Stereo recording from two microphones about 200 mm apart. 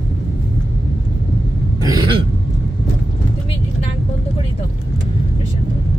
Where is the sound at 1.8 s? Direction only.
25° right (ahead or behind).